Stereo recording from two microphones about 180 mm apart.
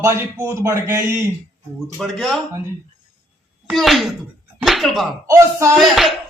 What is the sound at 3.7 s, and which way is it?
Speech, centre (ahead or behind).